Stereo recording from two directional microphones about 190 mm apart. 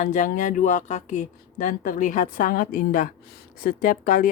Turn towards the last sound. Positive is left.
turn(degrees=40)  # may be behind; listen again after turning